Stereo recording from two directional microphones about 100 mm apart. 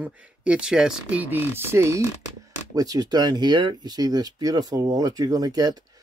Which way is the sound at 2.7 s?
40° right (ahead or behind).